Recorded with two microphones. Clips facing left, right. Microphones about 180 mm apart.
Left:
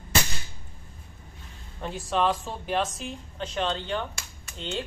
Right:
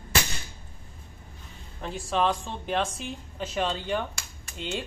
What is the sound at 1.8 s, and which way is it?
A woman's voice, centre (ahead or behind).